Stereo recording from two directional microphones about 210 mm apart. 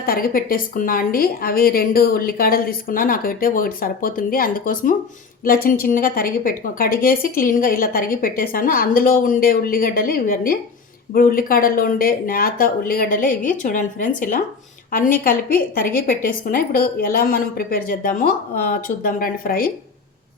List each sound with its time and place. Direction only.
0.0 s a woman's voice: 45° left (ahead or behind)